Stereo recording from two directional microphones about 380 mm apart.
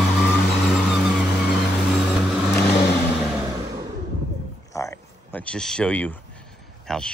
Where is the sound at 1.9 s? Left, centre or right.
Centre.